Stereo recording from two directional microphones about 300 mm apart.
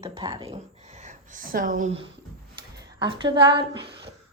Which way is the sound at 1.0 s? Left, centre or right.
Right.